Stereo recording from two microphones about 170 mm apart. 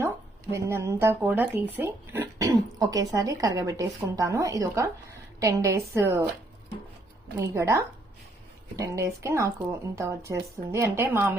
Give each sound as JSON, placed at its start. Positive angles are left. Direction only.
{"t": 0.5, "sound": "speech", "side_deg": -15}
{"t": 7.3, "sound": "speech", "side_deg": -15}